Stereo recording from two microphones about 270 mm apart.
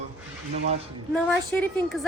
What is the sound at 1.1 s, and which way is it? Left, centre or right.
Speech, centre.